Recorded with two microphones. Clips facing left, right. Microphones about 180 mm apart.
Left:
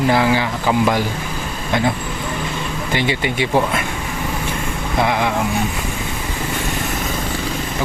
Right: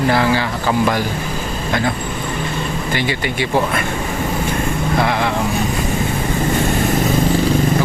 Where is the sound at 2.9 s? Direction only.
20° left (ahead or behind).